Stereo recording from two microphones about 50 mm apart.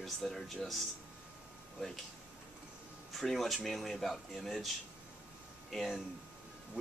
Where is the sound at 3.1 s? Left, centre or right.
Centre.